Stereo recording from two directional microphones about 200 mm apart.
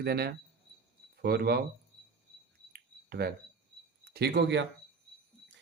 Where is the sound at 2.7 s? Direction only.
50° right (ahead or behind).